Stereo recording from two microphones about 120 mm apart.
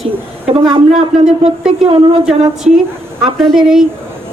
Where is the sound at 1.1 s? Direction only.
Centre (ahead or behind).